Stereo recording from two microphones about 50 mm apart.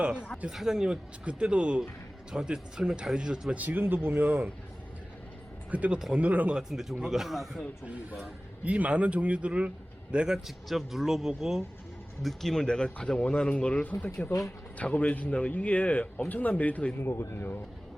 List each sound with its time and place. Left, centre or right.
0.0 s a man's voice: right
0.5 s speech: centre
1.2 s a man's voice: right
3.5 s speech: right
5.7 s a man's voice: right
6.6 s speech: centre
8.2 s a man's voice: right
10.3 s speech: centre
12.2 s speech: centre
12.6 s a man's voice: centre
13.9 s speech: left
14.8 s a man's voice: left
17.0 s speech: left